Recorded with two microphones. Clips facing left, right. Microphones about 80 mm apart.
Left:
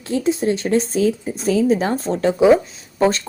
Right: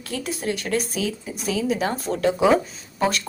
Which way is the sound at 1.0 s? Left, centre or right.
Left.